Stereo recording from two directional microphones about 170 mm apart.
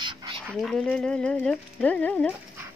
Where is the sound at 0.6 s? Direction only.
Centre (ahead or behind).